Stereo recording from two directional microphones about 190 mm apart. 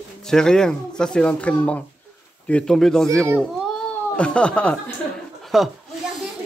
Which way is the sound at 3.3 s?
5° left (ahead or behind).